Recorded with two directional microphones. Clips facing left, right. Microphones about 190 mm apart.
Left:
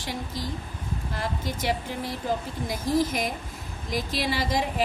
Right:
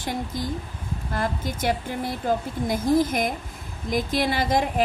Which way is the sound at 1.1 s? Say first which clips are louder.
Right 5 dB; 50° right (ahead or behind).